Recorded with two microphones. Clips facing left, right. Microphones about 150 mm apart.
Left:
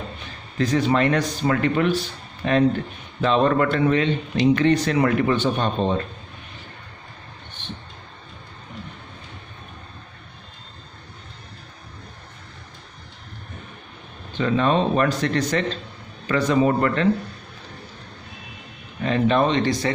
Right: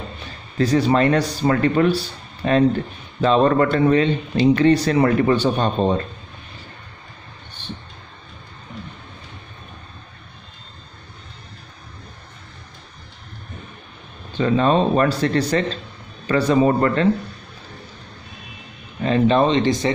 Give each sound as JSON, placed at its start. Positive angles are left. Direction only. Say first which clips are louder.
{"t": 0.6, "sound": "speech", "louder": "right 3 dB", "side_deg": -35}
{"t": 14.3, "sound": "speech", "louder": "right 3 dB", "side_deg": -35}
{"t": 19.0, "sound": "speech", "louder": "right 3 dB", "side_deg": -30}